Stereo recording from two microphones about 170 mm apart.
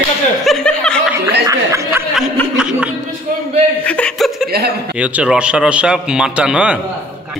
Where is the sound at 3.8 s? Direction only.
5° left (ahead or behind).